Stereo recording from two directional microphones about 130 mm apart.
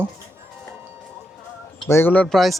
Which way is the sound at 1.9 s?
15° left (ahead or behind).